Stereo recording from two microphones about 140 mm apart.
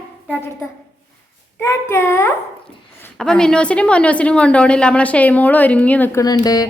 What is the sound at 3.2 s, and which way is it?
A woman's voice, 5° left (ahead or behind).